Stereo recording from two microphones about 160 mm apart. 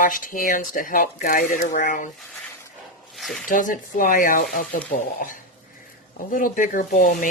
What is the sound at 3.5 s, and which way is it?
Speech, 55° left (ahead or behind).